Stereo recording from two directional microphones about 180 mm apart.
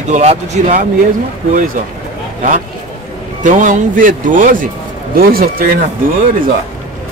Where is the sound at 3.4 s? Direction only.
45° right (ahead or behind).